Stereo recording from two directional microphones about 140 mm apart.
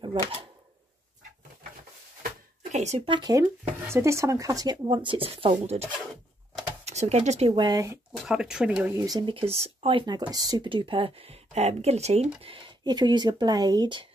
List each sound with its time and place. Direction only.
0.0 s speech: 35° right (ahead or behind)
2.7 s speech: 55° right (ahead or behind)
3.1 s speech: 30° right (ahead or behind)
3.8 s speech: 20° right (ahead or behind); by 7.6 s 45° right (ahead or behind)
7.6 s speech: 25° right (ahead or behind)
8.2 s speech: 5° right (ahead or behind)
8.9 s speech: 25° right (ahead or behind)